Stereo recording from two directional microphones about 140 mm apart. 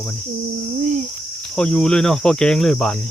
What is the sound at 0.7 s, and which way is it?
Cricket, 60° right (ahead or behind).